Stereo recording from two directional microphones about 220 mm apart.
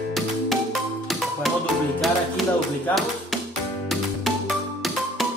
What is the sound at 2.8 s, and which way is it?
Speech, centre (ahead or behind).